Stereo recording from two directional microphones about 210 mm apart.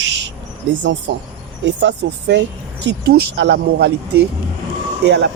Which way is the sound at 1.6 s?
55° right (ahead or behind).